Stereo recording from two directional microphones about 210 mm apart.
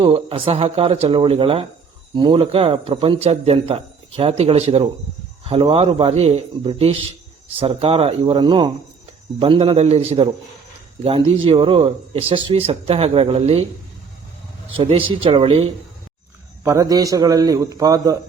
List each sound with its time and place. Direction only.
0.0 s speech: 25° right (ahead or behind)
14.8 s speech: 25° right (ahead or behind)
16.6 s a man's voice: 15° right (ahead or behind)